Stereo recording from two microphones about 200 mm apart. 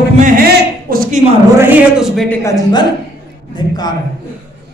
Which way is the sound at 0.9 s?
45° right (ahead or behind).